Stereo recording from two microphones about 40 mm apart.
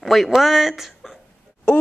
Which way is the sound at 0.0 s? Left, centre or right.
Centre.